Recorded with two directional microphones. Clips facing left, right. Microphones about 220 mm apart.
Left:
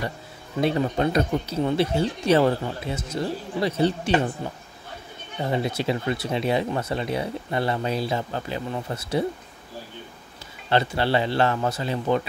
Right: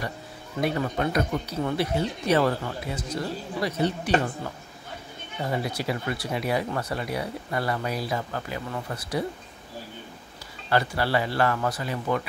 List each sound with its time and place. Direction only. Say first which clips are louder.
0.6 s speech: left 4 dB; 25° left (ahead or behind)
5.4 s speech: left 3 dB; 25° left (ahead or behind)
10.7 s speech: left 2 dB; 25° left (ahead or behind)